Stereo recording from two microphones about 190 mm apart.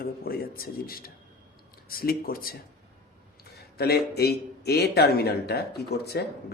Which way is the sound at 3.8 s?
55° left (ahead or behind).